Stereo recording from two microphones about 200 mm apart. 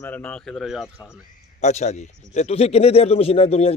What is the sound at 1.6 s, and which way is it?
A man's voice, 35° left (ahead or behind).